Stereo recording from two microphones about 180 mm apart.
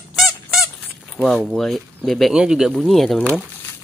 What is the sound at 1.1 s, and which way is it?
Speech, centre (ahead or behind).